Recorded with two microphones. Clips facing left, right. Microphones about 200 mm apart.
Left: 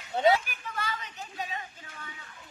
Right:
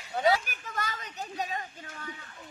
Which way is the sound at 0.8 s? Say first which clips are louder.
Right 1 dB; 45° right (ahead or behind).